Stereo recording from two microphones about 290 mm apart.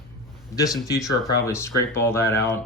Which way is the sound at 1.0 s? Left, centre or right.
Centre.